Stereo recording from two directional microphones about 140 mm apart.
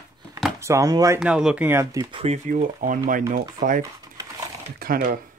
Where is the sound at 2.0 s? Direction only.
40° right (ahead or behind).